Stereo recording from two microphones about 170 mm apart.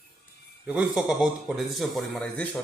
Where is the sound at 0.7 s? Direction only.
5° right (ahead or behind).